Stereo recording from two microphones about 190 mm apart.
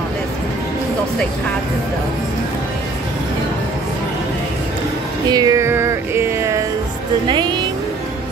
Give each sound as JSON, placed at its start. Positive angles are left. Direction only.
{"t": 5.3, "sound": "music", "side_deg": -20}
{"t": 7.2, "sound": "speech", "side_deg": -25}